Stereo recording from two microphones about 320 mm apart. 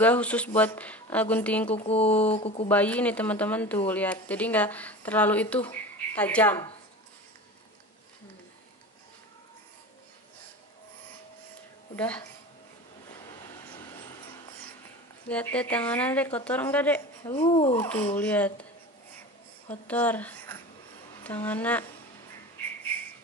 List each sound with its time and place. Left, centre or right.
0.0 s speech: centre
1.9 s speech: centre
2.7 s speech: centre
11.9 s speech: centre
13.7 s a sound: centre
15.2 s speech: centre
17.7 s speech: centre
19.7 s a woman's voice: centre